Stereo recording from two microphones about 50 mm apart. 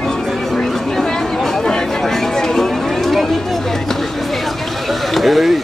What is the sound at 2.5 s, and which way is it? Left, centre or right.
Run, centre.